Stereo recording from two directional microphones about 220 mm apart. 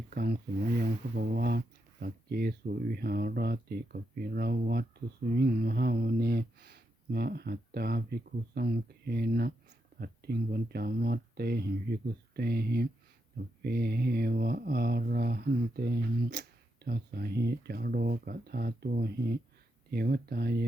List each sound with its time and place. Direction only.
0.1 s speech: 45° right (ahead or behind)